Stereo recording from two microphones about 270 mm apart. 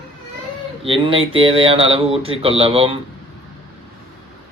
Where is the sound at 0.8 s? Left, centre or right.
Centre.